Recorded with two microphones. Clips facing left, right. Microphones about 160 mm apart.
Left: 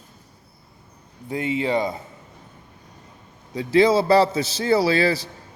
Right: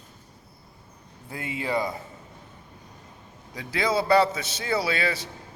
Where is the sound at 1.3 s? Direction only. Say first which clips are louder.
Left 7 dB; 20° left (ahead or behind).